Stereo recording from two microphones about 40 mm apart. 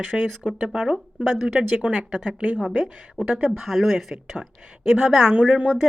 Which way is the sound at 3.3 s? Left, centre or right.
Right.